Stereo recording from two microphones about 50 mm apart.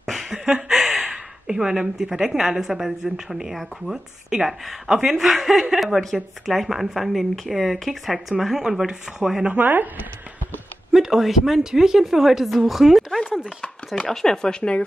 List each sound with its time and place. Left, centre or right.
0.0 s a sound: centre
1.1 s a woman's voice: centre
9.5 s speech: right
10.9 s speech: centre
13.9 s speech: centre